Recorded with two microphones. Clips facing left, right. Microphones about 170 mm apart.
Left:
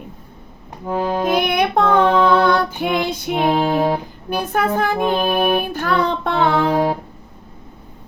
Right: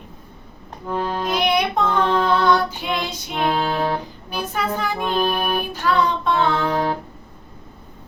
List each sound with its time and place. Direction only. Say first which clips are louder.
0.9 s accordion: left 4 dB; 15° left (ahead or behind)
1.2 s music: left 2 dB; 55° left (ahead or behind)
3.4 s music: left 4 dB; 15° left (ahead or behind)
4.3 s music: left 6 dB; 55° left (ahead or behind)
5.0 s music: left 2 dB; 20° left (ahead or behind)
5.7 s music: left 1 dB; 55° left (ahead or behind)
6.7 s music: left 4 dB; 10° left (ahead or behind)